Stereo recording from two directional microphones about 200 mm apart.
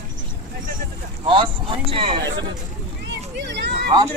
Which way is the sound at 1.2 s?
25° right (ahead or behind).